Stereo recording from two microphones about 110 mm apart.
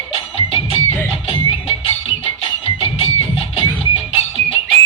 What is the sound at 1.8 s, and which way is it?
Music, 60° left (ahead or behind).